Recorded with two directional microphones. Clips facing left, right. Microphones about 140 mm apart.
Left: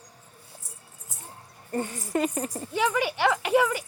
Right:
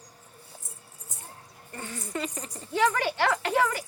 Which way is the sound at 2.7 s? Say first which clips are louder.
Right 1 dB; 10° left (ahead or behind).